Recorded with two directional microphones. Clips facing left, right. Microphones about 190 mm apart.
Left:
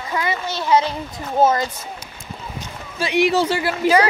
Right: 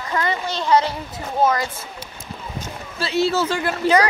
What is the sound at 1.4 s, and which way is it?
Speech, 25° left (ahead or behind).